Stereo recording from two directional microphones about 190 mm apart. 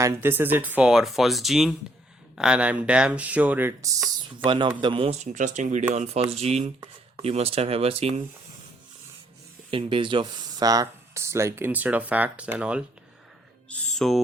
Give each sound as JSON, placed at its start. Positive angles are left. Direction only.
{"t": 0.0, "sound": "speech", "side_deg": -15}
{"t": 4.4, "sound": "a man's voice", "side_deg": -25}
{"t": 9.6, "sound": "speech", "side_deg": -30}
{"t": 13.7, "sound": "speech", "side_deg": 5}